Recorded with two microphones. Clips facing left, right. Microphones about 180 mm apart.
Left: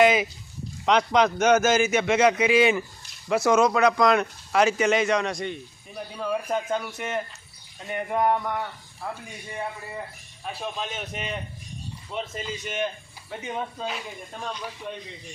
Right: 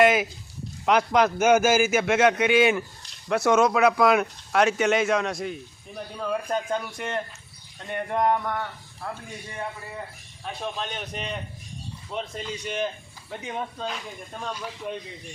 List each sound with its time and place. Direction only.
0.0 s a man's voice: centre (ahead or behind)
10.4 s speech: 5° left (ahead or behind)